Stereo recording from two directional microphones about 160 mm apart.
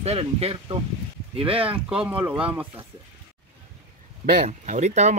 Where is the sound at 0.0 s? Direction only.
40° right (ahead or behind).